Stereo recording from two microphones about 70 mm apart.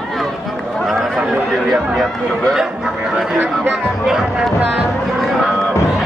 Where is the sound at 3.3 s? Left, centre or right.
Right.